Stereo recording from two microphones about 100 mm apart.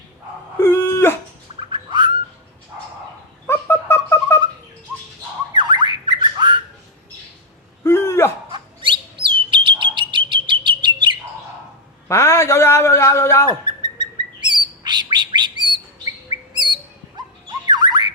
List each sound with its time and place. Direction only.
0.6 s dog: 25° left (ahead or behind)
1.7 s bird: 50° right (ahead or behind)
3.4 s a sound: 25° left (ahead or behind)
5.5 s squawk: 50° right (ahead or behind)
7.9 s a sound: 25° left (ahead or behind)
8.4 s bird: 55° right (ahead or behind)
12.0 s a sound: 30° left (ahead or behind)
13.5 s bird: 50° right (ahead or behind)
17.2 s dog: 45° right (ahead or behind)
17.7 s squawk: 45° right (ahead or behind)